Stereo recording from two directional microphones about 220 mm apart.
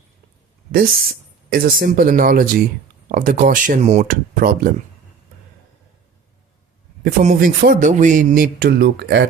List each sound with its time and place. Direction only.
0.7 s speech: 40° right (ahead or behind)
7.0 s speech: 35° right (ahead or behind)